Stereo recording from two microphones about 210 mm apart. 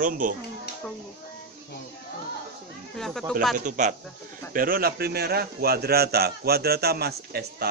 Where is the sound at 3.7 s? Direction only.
35° right (ahead or behind).